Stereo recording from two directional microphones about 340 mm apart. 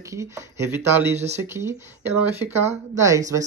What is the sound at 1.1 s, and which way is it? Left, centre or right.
Speech, centre.